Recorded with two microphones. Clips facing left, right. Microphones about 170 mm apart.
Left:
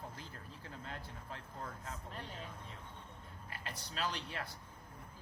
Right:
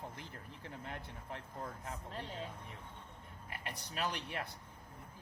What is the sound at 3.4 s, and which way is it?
Speech, 20° right (ahead or behind).